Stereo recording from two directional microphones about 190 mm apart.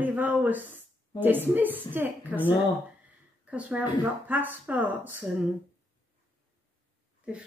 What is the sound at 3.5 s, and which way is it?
Speech, 5° right (ahead or behind).